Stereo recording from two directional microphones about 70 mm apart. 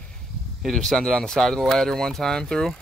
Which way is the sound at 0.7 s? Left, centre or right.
Centre.